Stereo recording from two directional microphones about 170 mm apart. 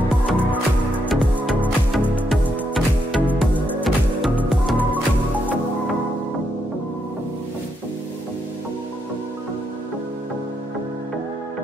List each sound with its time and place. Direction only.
0.3 s music: 10° left (ahead or behind)
1.0 s music: 5° right (ahead or behind)